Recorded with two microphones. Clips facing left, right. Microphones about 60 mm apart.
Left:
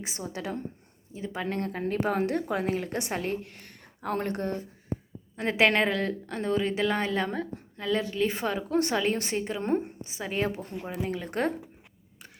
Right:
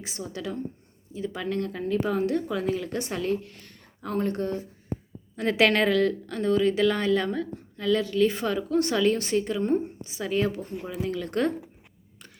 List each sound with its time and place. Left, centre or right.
0.0 s a woman's voice: left
5.4 s a woman's voice: left
9.6 s speech: left
10.2 s speech: left
11.1 s a woman's voice: left